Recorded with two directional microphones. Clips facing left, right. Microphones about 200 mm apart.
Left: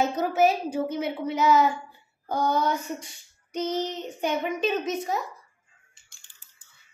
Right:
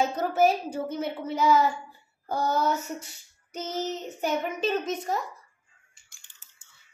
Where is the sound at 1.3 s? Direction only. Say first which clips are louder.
Left 1 dB; 10° right (ahead or behind).